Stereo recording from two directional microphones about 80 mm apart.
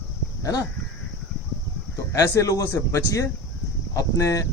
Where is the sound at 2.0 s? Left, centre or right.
Left.